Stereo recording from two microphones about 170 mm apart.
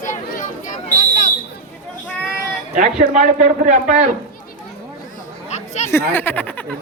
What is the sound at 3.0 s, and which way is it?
A man's voice, 50° right (ahead or behind).